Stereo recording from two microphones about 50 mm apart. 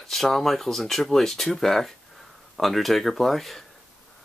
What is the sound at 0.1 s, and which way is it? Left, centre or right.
Speech, centre.